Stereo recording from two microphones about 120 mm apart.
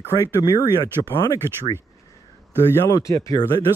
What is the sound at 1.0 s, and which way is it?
Speech, 40° left (ahead or behind).